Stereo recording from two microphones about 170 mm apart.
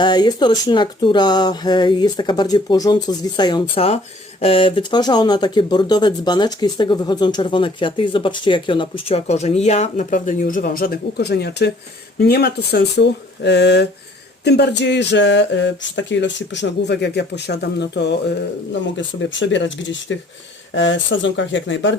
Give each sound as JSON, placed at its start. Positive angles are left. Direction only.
{"t": 0.0, "sound": "speech", "side_deg": 25}